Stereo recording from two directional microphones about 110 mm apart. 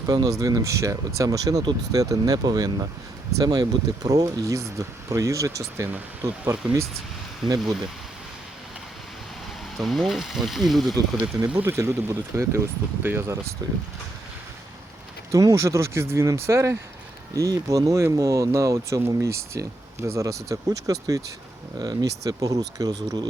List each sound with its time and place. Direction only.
0.0 s speech: 35° right (ahead or behind)
9.7 s speech: centre (ahead or behind)
11.4 s speech: 20° right (ahead or behind)
13.6 s speech: 35° right (ahead or behind)
15.3 s speech: 30° right (ahead or behind)